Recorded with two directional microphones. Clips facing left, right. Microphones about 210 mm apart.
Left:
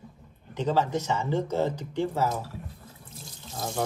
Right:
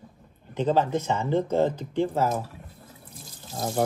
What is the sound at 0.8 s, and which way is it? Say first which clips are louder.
Speech: right 2 dB; 55° right (ahead or behind).